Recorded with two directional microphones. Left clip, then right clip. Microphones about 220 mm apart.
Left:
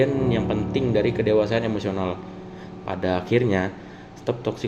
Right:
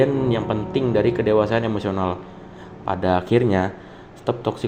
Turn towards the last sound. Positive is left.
turn(degrees=-15)  # may be behind; listen again after turning